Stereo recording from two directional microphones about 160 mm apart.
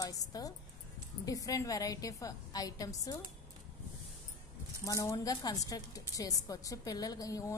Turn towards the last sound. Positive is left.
turn(degrees=20)  # may be behind; listen again after turning